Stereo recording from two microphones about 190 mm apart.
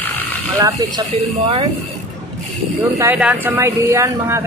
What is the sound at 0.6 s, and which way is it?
Speech, 20° right (ahead or behind).